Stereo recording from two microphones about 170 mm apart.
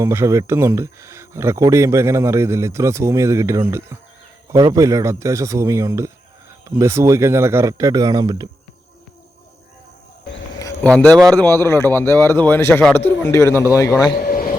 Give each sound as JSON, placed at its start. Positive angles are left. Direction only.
{"t": 0.0, "sound": "speech", "side_deg": -15}
{"t": 10.8, "sound": "speech", "side_deg": 5}
{"t": 14.2, "sound": "a sound", "side_deg": 60}